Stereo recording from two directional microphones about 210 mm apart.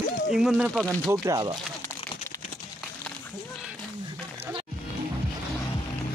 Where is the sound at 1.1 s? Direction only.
15° right (ahead or behind).